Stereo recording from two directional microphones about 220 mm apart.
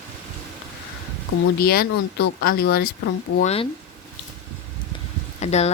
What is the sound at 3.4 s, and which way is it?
Speech, 30° left (ahead or behind).